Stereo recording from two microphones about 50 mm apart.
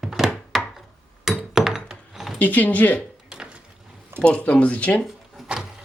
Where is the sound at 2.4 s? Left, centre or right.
Left.